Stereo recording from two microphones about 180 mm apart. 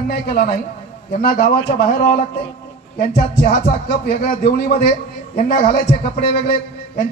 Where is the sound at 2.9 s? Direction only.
50° left (ahead or behind).